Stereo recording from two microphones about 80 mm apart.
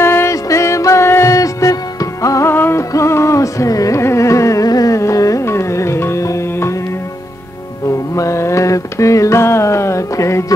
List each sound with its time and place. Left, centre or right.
0.0 s music: left
2.4 s music: left
2.9 s carnatic music: left
7.9 s mantra: left